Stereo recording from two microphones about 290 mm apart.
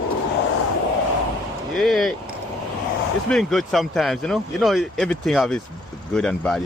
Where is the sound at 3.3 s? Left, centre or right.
Centre.